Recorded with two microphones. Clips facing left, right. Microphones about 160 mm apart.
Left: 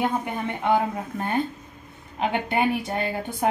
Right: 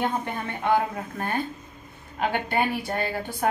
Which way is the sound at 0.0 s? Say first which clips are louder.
Left 2 dB; 10° left (ahead or behind).